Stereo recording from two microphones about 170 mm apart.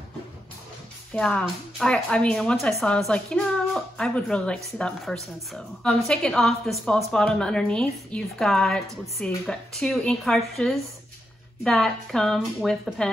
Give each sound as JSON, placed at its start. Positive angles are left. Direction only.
{"t": 1.1, "sound": "a woman's voice", "side_deg": 5}